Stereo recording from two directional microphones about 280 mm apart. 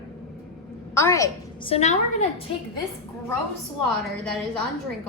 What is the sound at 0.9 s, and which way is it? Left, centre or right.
Speech, centre.